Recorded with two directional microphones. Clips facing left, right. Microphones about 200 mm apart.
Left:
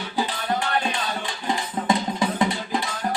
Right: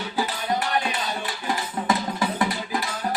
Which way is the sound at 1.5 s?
20° left (ahead or behind).